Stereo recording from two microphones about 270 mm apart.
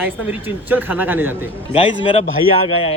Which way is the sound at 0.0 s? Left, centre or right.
Centre.